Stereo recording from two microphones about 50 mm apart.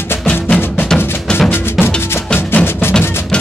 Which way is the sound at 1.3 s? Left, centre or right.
Centre.